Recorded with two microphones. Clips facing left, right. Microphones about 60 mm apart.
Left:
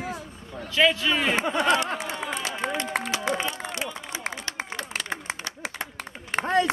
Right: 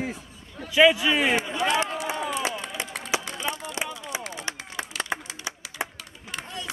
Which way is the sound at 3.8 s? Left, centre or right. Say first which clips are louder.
Right 1 dB; centre.